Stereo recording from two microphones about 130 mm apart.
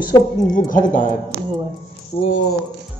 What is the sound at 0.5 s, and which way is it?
Speech, 90° left.